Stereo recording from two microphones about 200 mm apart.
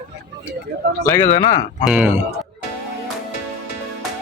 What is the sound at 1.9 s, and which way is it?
Speech, 5° right (ahead or behind).